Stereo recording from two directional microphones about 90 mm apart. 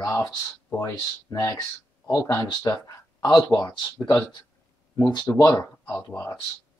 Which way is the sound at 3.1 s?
50° left (ahead or behind).